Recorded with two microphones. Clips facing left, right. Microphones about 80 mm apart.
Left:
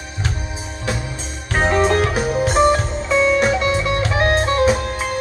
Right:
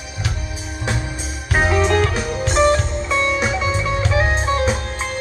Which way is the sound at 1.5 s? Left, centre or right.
Centre.